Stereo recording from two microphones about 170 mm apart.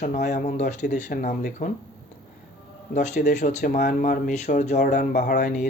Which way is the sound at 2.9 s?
45° left (ahead or behind).